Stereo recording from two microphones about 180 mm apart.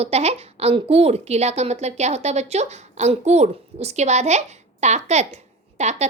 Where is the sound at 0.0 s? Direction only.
35° right (ahead or behind).